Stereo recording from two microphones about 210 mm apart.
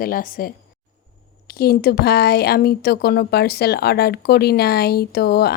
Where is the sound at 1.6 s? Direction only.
45° left (ahead or behind).